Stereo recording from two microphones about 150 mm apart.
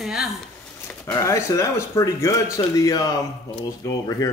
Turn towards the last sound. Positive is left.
turn(degrees=20)  # may be behind; listen again after turning